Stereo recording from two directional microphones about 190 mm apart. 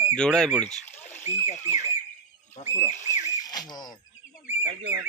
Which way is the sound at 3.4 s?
20° left (ahead or behind).